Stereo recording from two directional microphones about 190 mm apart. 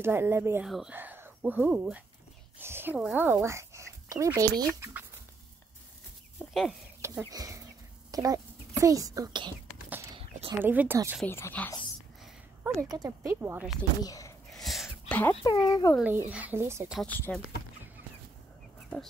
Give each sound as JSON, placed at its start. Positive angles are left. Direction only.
{"t": 0.0, "sound": "speech", "side_deg": -10}
{"t": 6.4, "sound": "chicken", "side_deg": 0}
{"t": 7.0, "sound": "a child's voice", "side_deg": -15}
{"t": 10.1, "sound": "a sound", "side_deg": -25}
{"t": 10.6, "sound": "speech", "side_deg": -10}
{"t": 11.2, "sound": "speech", "side_deg": 10}
{"t": 12.8, "sound": "speech", "side_deg": -20}
{"t": 14.0, "sound": "speech", "side_deg": 20}
{"t": 14.5, "sound": "a sound", "side_deg": 0}
{"t": 15.4, "sound": "speech", "side_deg": 20}
{"t": 16.0, "sound": "speech", "side_deg": -10}
{"t": 17.0, "sound": "speech", "side_deg": 5}